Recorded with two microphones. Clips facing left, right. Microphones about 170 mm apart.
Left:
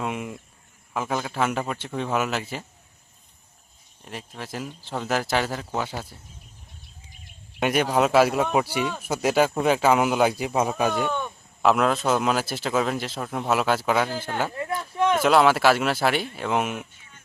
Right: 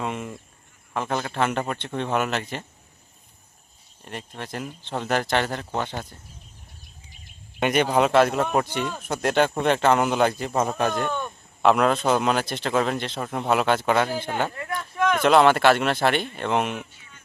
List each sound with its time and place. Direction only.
0.0 s speech: 5° left (ahead or behind)
4.0 s speech: centre (ahead or behind)
7.6 s speech: 5° left (ahead or behind)
14.8 s a sound: 30° left (ahead or behind)
15.2 s speech: 5° left (ahead or behind)